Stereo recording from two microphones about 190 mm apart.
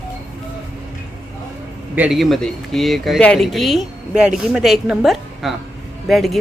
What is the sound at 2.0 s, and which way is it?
Speech, centre (ahead or behind).